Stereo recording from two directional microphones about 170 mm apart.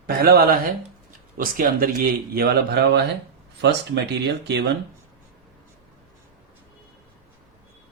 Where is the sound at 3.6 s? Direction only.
85° right.